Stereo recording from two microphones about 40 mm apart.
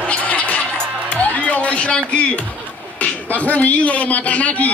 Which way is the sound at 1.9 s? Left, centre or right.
Left.